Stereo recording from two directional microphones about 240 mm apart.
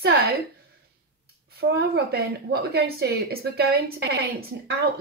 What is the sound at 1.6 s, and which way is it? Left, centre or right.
A woman's voice, right.